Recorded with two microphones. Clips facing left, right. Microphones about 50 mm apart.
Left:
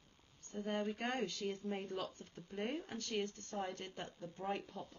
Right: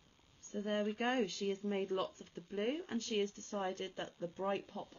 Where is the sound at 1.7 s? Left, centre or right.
Centre.